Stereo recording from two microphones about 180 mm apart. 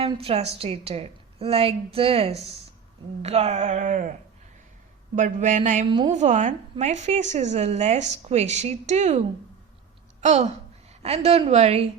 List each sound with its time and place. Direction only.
0.0 s a woman's voice: 30° right (ahead or behind)
5.1 s a sound: 45° right (ahead or behind)
6.1 s a woman's voice: 40° right (ahead or behind)